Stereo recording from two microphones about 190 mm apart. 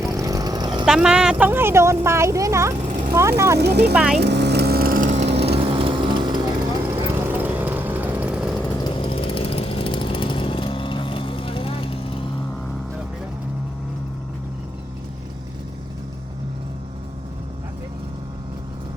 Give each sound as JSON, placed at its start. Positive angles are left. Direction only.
{"t": 0.0, "sound": "vehicle", "side_deg": -15}
{"t": 0.9, "sound": "speech", "side_deg": -5}
{"t": 3.6, "sound": "speech", "side_deg": -60}
{"t": 3.9, "sound": "speech", "side_deg": -5}
{"t": 4.2, "sound": "vehicle", "side_deg": -60}
{"t": 5.5, "sound": "music", "side_deg": -25}
{"t": 7.1, "sound": "lawn mower", "side_deg": -10}
{"t": 8.7, "sound": "chainsaw", "side_deg": 25}